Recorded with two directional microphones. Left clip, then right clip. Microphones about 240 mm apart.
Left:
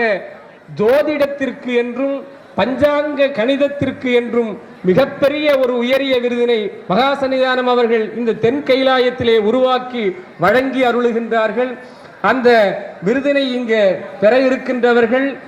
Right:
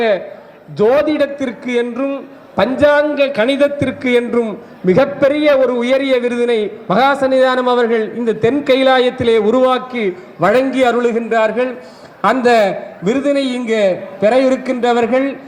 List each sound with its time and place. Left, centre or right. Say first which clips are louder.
0.8 s a man's voice: right 1 dB; right